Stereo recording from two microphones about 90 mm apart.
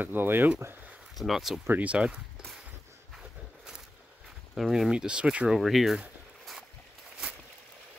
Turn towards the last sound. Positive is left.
turn(degrees=0)  # may be behind; listen again after turning